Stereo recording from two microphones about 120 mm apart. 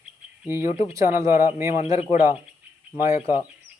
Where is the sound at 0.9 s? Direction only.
25° right (ahead or behind).